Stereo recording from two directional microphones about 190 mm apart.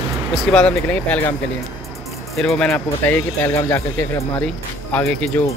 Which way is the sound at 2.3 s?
5° left (ahead or behind).